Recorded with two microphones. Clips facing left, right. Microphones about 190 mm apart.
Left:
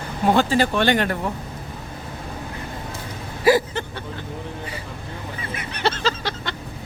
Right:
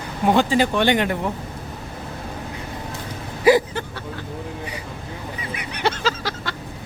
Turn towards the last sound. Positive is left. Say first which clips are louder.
# even
turn(degrees=-5)  # may be behind; listen again after turning